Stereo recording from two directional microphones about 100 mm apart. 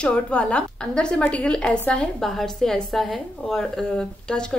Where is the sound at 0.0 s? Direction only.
10° left (ahead or behind).